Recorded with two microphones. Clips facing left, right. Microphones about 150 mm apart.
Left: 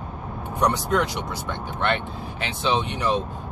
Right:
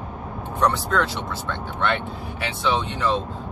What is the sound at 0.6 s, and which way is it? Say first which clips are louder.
Speech: even; 15° left (ahead or behind).